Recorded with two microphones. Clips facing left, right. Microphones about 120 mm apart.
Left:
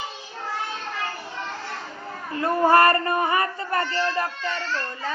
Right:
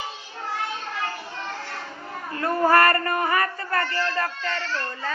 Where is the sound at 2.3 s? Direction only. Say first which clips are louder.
Left 1 dB; 20° left (ahead or behind).